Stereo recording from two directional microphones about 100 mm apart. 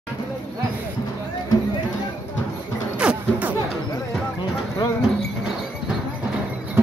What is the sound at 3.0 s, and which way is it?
Music, 15° right (ahead or behind).